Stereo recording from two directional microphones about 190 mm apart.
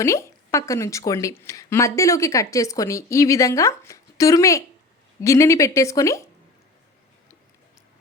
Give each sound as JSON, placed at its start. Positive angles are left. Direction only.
{"t": 0.0, "sound": "a woman's voice", "side_deg": 15}